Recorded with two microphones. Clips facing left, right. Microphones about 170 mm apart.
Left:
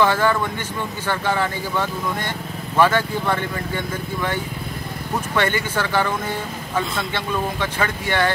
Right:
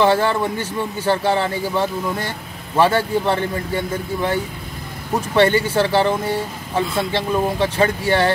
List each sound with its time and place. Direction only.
0.0 s speech: 30° right (ahead or behind)